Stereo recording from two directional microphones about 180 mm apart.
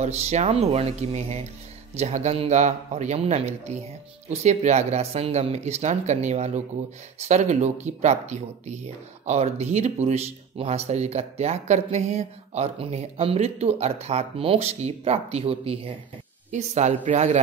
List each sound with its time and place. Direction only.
0.0 s speech: 35° right (ahead or behind)